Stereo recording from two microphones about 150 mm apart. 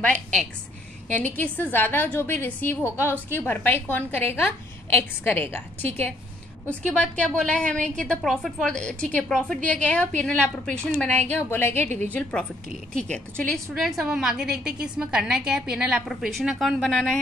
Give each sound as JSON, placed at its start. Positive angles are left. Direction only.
{"t": 0.0, "sound": "a woman's voice", "side_deg": 10}